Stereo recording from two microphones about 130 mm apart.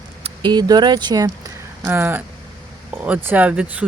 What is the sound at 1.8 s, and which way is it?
Speech, 15° right (ahead or behind).